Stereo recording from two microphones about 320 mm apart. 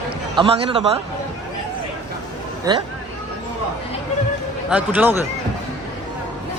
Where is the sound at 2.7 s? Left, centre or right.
Centre.